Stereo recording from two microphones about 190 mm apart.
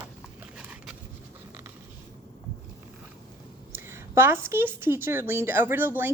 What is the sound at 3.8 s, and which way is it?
A woman's voice, 15° right (ahead or behind).